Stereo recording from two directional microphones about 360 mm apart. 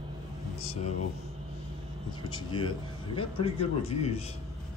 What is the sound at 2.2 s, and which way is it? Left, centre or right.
A man's voice, centre.